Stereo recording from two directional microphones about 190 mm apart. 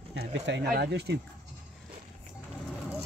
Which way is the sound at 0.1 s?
70° right (ahead or behind).